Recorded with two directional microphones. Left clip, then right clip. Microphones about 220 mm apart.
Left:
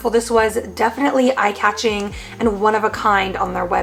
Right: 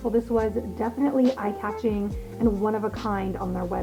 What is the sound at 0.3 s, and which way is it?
A woman's voice, 10° left (ahead or behind).